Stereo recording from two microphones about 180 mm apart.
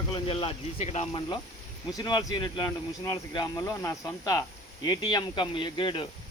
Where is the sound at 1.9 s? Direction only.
20° left (ahead or behind).